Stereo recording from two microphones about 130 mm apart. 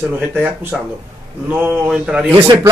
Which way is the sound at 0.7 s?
Centre (ahead or behind).